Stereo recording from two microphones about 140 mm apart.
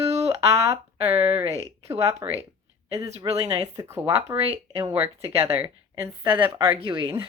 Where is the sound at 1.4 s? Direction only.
50° right (ahead or behind).